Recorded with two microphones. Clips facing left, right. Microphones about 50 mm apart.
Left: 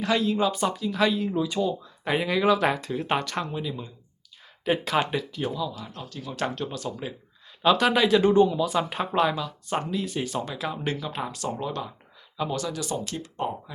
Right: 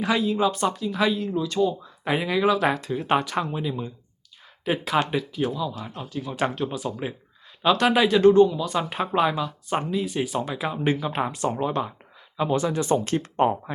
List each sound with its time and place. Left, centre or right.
0.0 s speech: centre
1.3 s speech: centre
1.8 s speech: centre
4.6 s speech: centre
7.6 s speech: centre
8.2 s speech: centre; by 13.7 s right